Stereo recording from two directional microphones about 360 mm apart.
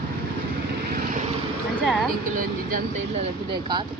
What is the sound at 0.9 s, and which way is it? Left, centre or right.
Vehicle, right.